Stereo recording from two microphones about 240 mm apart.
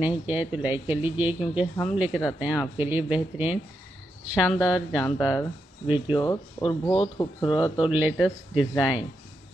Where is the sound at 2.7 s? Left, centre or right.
Centre.